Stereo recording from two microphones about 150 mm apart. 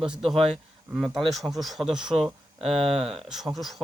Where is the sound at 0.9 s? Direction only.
Centre (ahead or behind).